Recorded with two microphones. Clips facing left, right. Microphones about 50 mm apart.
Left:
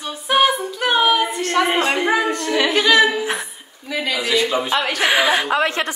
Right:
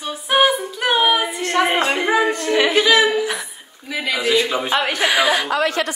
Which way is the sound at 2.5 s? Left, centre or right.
Right.